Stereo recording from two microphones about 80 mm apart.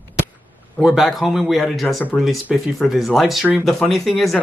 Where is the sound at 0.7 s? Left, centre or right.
Centre.